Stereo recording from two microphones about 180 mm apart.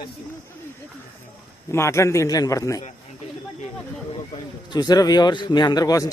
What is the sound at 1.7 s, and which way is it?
A man's voice, 15° left (ahead or behind).